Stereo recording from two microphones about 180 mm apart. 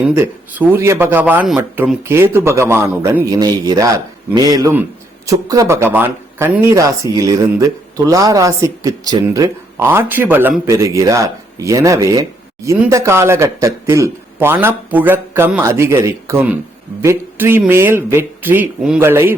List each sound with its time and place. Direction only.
0.0 s speech: 10° right (ahead or behind)